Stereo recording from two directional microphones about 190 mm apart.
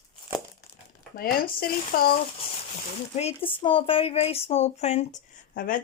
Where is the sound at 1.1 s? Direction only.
50° left (ahead or behind).